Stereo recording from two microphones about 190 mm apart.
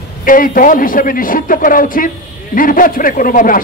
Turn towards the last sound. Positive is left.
turn(degrees=45)  # may be behind; listen again after turning